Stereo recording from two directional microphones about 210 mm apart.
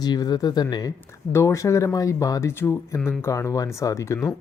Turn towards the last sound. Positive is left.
turn(degrees=15)  # may be behind; listen again after turning